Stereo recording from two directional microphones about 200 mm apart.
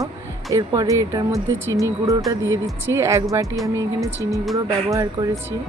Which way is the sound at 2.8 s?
15° right (ahead or behind).